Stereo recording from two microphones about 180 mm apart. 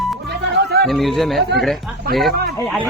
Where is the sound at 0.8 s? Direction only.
Centre (ahead or behind).